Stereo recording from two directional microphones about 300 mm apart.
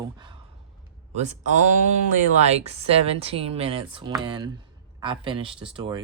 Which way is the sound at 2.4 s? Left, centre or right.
Right.